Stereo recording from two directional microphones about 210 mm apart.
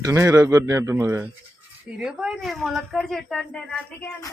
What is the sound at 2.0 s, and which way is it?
Speech, 5° right (ahead or behind).